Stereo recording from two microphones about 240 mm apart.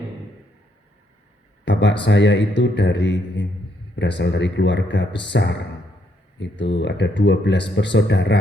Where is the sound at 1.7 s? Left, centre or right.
Left.